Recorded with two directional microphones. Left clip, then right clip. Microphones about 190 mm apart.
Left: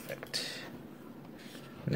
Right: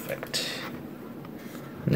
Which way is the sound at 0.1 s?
Centre (ahead or behind).